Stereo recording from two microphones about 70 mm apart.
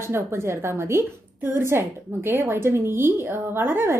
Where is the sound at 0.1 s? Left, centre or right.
Right.